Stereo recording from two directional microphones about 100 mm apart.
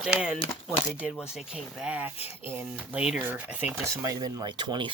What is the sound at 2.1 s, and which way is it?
Speech, 85° left.